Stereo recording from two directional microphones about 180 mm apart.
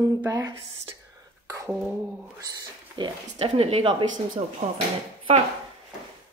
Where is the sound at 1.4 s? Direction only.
20° right (ahead or behind).